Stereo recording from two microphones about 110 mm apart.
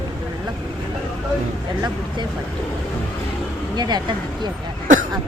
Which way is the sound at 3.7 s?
40° right (ahead or behind).